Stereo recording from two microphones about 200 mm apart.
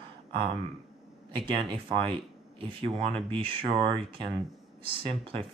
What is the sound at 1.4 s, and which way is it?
Speech, 25° right (ahead or behind).